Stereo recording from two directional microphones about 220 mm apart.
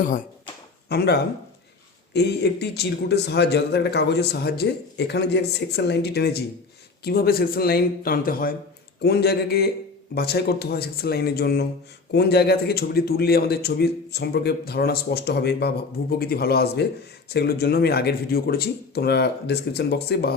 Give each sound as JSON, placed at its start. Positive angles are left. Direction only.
{"t": 0.0, "sound": "a man's voice", "side_deg": 35}